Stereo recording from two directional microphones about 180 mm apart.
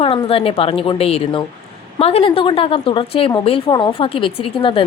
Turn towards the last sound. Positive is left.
turn(degrees=30)  # may be behind; listen again after turning